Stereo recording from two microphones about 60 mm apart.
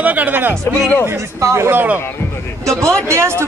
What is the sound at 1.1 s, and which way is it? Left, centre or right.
Speech, right.